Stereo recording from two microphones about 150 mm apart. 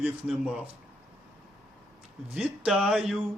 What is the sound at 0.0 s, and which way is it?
Speech, 5° right (ahead or behind).